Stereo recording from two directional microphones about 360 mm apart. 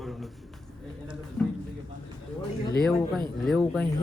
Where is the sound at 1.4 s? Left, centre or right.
Centre.